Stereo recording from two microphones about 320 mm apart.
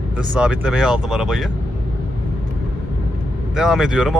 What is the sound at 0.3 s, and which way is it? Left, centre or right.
Speech, centre.